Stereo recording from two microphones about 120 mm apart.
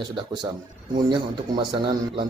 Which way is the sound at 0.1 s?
40° right (ahead or behind).